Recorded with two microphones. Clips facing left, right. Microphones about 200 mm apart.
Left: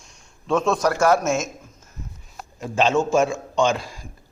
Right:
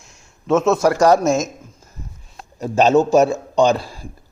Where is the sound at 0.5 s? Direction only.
25° right (ahead or behind).